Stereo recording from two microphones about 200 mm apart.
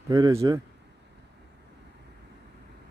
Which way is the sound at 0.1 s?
15° right (ahead or behind).